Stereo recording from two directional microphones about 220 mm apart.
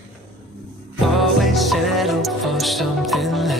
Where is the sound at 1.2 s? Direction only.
Centre (ahead or behind).